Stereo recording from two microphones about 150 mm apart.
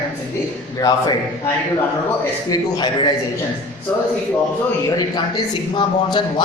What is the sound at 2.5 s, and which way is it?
Speech, 30° left (ahead or behind).